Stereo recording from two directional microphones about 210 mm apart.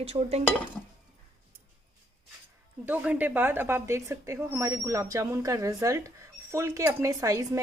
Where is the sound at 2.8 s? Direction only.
5° right (ahead or behind).